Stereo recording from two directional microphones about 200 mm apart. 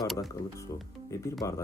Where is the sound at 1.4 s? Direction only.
15° left (ahead or behind).